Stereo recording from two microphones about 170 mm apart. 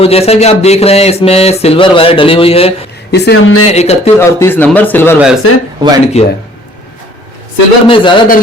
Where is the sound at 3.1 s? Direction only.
75° left (ahead or behind).